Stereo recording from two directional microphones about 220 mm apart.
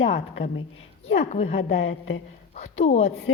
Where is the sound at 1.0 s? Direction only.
30° left (ahead or behind).